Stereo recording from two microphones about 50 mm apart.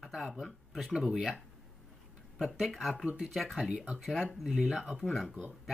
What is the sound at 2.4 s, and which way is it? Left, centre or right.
Speech, centre.